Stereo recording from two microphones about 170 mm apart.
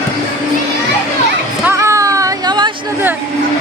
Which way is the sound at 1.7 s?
15° right (ahead or behind).